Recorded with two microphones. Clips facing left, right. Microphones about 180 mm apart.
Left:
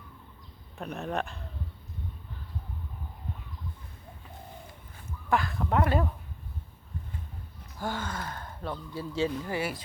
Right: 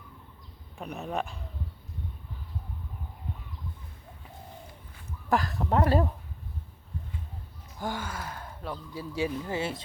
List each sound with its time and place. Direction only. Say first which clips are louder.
0.8 s speech: even; 5° right (ahead or behind)
5.3 s speech: right 1 dB; 40° right (ahead or behind)
7.8 s speech: even; 15° right (ahead or behind)